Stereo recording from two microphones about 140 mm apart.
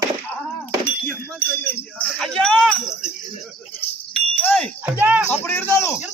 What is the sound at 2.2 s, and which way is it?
Jingle bell, 5° left (ahead or behind).